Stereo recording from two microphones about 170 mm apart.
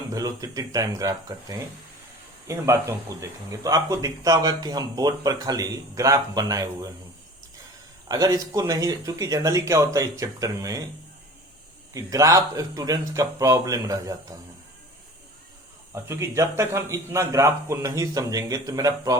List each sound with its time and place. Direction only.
0.1 s speech: 20° right (ahead or behind)
8.0 s speech: 20° right (ahead or behind)
11.9 s speech: 20° right (ahead or behind)
16.0 s speech: 15° right (ahead or behind)